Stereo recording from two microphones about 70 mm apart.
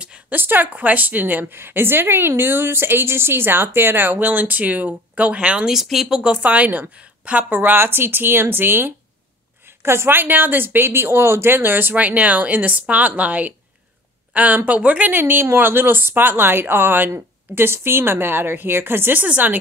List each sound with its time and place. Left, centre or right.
0.0 s a sound: centre
0.4 s a woman's voice: right
5.8 s speech: centre
6.3 s a woman's voice: right
11.9 s a woman's voice: centre